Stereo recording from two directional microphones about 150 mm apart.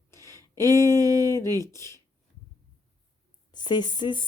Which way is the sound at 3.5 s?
30° left (ahead or behind).